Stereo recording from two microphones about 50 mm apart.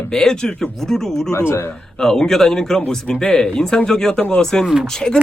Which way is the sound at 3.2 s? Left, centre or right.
Left.